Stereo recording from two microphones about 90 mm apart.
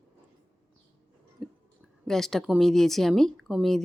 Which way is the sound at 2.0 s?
5° left (ahead or behind).